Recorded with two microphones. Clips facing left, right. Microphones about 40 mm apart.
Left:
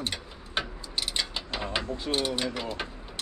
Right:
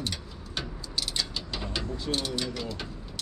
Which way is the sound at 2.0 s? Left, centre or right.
Left.